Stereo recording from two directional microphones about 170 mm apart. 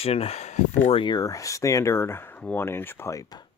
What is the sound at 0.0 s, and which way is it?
Speech, 35° left (ahead or behind).